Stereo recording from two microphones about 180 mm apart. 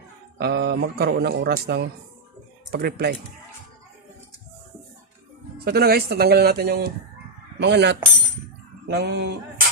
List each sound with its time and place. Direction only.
0.3 s speech: 65° right (ahead or behind)
5.6 s speech: 60° right (ahead or behind)
7.6 s a sound: 70° right (ahead or behind)